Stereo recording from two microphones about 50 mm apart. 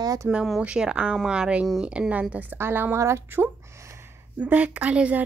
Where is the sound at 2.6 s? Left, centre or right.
Right.